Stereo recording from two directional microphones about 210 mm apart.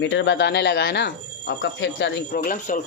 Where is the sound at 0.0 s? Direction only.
60° left (ahead or behind).